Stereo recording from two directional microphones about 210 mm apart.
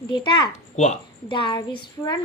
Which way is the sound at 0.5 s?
35° left (ahead or behind).